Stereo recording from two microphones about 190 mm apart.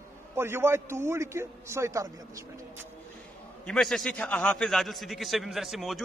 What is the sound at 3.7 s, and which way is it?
A man's voice, centre (ahead or behind).